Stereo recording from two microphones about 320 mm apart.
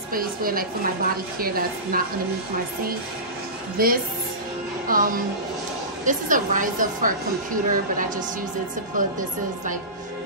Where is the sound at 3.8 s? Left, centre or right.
Right.